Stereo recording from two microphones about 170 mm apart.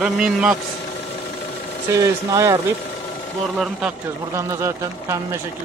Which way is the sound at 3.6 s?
5° right (ahead or behind).